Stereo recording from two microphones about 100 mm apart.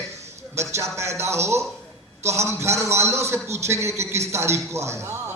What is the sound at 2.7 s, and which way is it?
Speech, 30° right (ahead or behind).